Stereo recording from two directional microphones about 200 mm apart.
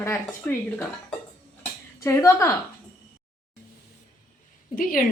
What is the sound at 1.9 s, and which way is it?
Speech, 15° left (ahead or behind).